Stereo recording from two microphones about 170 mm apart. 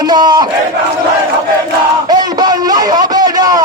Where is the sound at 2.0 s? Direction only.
25° right (ahead or behind).